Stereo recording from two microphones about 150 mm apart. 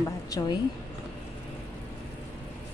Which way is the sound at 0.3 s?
25° left (ahead or behind).